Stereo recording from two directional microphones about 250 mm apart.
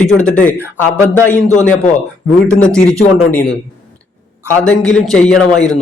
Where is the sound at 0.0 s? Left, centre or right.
Left.